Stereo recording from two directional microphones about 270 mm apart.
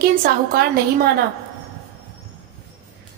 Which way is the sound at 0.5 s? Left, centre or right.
Right.